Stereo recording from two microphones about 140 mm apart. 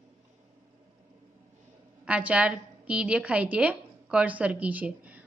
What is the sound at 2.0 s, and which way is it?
A woman's voice, 10° right (ahead or behind).